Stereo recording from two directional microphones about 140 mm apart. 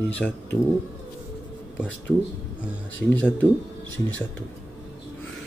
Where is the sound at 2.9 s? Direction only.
10° left (ahead or behind).